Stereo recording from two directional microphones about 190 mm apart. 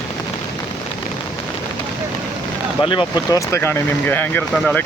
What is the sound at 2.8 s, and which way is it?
Speech, 25° left (ahead or behind).